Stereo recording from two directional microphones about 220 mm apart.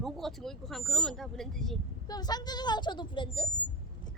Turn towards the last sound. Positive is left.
turn(degrees=20)  # may be behind; listen again after turning